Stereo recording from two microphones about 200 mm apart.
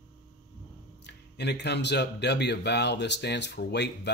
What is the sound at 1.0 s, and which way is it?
Speech, 55° left (ahead or behind).